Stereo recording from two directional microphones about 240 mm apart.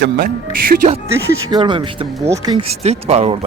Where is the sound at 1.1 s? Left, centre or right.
Centre.